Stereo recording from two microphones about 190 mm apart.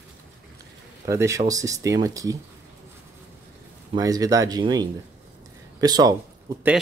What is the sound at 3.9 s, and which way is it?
Speech, 20° right (ahead or behind).